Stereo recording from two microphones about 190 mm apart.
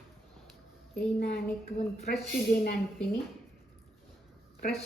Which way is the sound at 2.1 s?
50° left (ahead or behind).